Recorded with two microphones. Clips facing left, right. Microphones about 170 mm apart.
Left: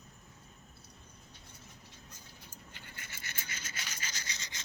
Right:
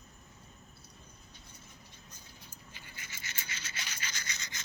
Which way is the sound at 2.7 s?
55° left (ahead or behind).